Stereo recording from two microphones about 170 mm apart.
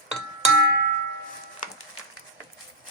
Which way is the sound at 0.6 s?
65° right (ahead or behind).